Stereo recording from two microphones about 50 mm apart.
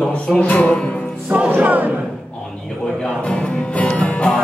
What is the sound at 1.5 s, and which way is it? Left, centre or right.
Speech, right.